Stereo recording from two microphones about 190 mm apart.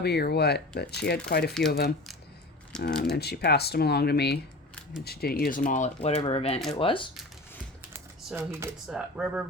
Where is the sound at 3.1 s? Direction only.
60° left (ahead or behind); by 7.1 s 25° left (ahead or behind).